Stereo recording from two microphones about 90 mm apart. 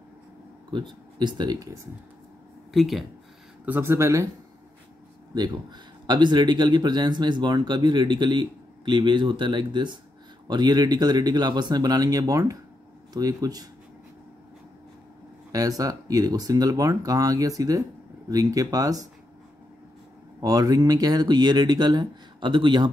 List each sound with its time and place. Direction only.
0.7 s speech: 60° right (ahead or behind)
2.7 s speech: centre (ahead or behind)
3.6 s speech: 25° right (ahead or behind)
6.0 s speech: 55° right (ahead or behind)
15.5 s speech: 40° right (ahead or behind)
20.3 s speech: 45° right (ahead or behind); by 22.8 s 60° right (ahead or behind)